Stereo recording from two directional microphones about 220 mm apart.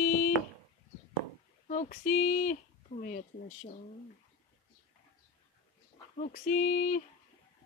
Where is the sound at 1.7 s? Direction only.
35° left (ahead or behind).